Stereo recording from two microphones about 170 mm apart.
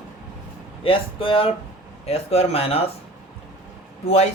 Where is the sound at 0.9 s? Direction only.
30° left (ahead or behind).